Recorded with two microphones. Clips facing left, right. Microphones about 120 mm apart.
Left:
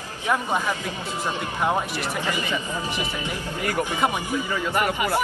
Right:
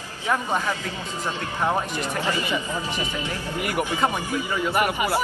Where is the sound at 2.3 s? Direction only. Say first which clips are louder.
Right 1 dB; 15° right (ahead or behind).